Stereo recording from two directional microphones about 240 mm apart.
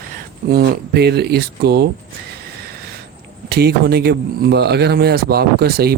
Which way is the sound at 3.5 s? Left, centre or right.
Right.